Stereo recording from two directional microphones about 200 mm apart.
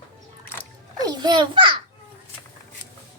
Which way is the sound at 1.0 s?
20° right (ahead or behind).